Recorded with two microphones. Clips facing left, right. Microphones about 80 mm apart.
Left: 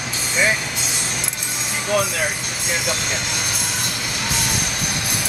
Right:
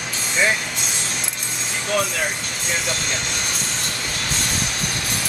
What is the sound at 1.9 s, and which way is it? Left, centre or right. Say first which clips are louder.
Music: left 2 dB; centre.